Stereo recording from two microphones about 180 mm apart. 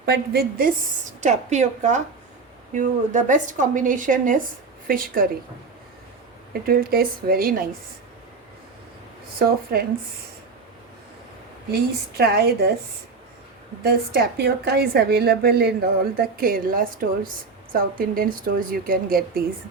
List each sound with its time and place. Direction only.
0.0 s a woman's voice: 60° right (ahead or behind)
1.2 s a woman's voice: 40° right (ahead or behind)
6.5 s a woman's voice: 55° right (ahead or behind)
9.4 s a woman's voice: 60° right (ahead or behind)
11.7 s a woman's voice: 60° right (ahead or behind)
13.8 s a woman's voice: 60° right (ahead or behind)